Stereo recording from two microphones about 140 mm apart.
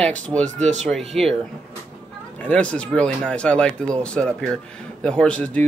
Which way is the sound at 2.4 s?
10° left (ahead or behind).